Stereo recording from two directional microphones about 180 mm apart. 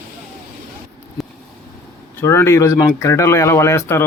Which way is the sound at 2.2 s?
15° left (ahead or behind).